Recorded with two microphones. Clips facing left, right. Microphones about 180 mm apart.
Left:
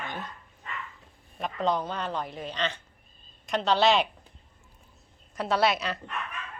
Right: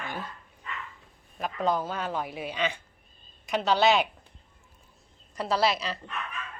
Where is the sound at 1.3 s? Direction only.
5° right (ahead or behind).